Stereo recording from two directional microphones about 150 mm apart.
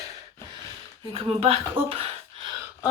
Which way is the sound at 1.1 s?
40° right (ahead or behind).